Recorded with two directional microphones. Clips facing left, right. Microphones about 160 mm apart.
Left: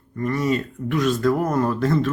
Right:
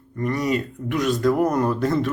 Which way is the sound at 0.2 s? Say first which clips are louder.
Left 1 dB; 15° right (ahead or behind).